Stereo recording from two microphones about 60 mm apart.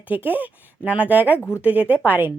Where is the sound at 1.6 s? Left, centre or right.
Right.